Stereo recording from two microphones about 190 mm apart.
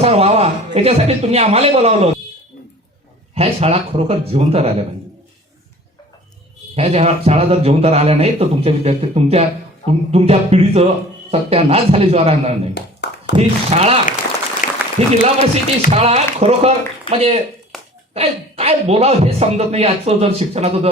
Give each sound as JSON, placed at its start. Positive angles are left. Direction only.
{"t": 0.0, "sound": "speech", "side_deg": -30}
{"t": 3.3, "sound": "speech", "side_deg": -35}
{"t": 6.7, "sound": "speech", "side_deg": -35}
{"t": 12.7, "sound": "a sound", "side_deg": 60}
{"t": 13.3, "sound": "speech", "side_deg": -35}
{"t": 14.6, "sound": "applause", "side_deg": 45}
{"t": 15.0, "sound": "speech", "side_deg": -35}